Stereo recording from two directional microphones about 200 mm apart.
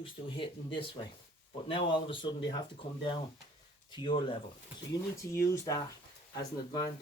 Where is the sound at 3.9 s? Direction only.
25° left (ahead or behind).